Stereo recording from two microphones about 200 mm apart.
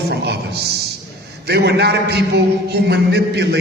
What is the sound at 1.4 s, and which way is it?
A man's voice, 55° right (ahead or behind).